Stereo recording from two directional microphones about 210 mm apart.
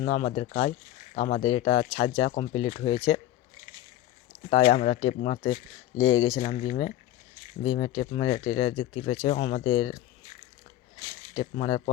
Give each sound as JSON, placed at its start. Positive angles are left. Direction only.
{"t": 0.0, "sound": "speech", "side_deg": 30}
{"t": 4.7, "sound": "speech", "side_deg": 30}
{"t": 6.0, "sound": "speech", "side_deg": 70}
{"t": 6.4, "sound": "speech", "side_deg": 35}
{"t": 11.5, "sound": "speech", "side_deg": 30}